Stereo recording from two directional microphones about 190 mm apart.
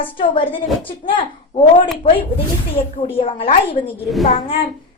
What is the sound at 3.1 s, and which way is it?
Speech, 30° left (ahead or behind).